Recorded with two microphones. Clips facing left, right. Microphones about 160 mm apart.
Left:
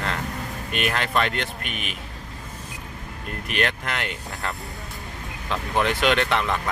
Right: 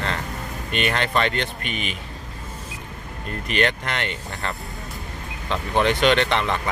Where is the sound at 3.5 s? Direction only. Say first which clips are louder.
Right 3 dB; centre (ahead or behind).